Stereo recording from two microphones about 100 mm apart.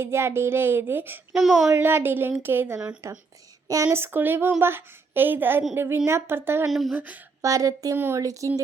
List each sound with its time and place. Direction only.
0.0 s speech: 25° right (ahead or behind)
1.3 s speech: centre (ahead or behind)
1.6 s speech: 25° right (ahead or behind)
6.7 s speech: centre (ahead or behind)
6.9 s speech: 15° right (ahead or behind)
7.4 s speech: 35° right (ahead or behind)
7.9 s speech: 20° right (ahead or behind)
8.2 s speech: 35° right (ahead or behind)